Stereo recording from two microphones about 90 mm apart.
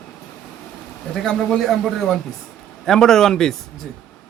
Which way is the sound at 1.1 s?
5° left (ahead or behind).